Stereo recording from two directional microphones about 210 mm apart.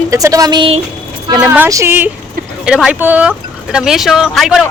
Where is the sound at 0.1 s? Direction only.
15° right (ahead or behind).